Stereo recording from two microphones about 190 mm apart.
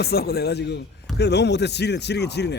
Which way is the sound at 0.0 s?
55° left (ahead or behind).